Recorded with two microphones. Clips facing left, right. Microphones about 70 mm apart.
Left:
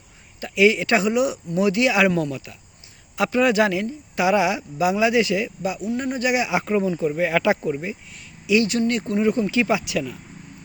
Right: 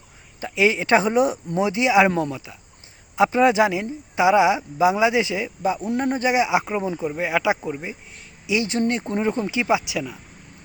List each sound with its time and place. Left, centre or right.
0.3 s speech: right
1.6 s speech: right